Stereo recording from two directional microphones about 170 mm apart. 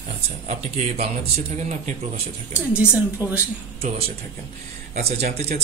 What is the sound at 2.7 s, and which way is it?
Speech, 10° right (ahead or behind).